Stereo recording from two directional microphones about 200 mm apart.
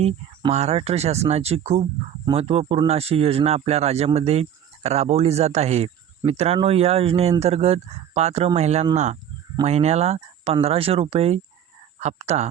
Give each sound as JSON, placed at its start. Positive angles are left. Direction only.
{"t": 0.0, "sound": "speech", "side_deg": -30}